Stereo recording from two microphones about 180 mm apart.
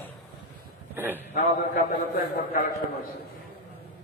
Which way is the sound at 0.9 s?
10° right (ahead or behind).